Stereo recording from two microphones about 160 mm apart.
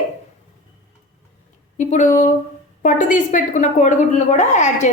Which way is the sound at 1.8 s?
50° left (ahead or behind).